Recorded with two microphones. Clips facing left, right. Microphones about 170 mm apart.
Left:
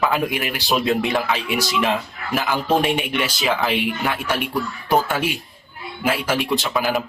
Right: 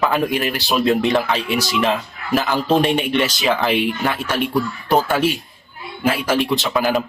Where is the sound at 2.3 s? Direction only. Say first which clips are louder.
Right 3 dB; 20° right (ahead or behind).